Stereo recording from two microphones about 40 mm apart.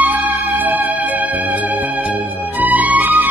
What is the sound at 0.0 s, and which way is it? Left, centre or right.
Music, right.